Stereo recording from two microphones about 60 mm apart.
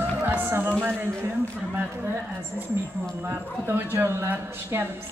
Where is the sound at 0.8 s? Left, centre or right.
Right.